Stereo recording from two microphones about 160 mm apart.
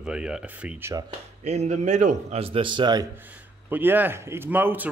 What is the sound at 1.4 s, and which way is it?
A man's voice, 45° right (ahead or behind).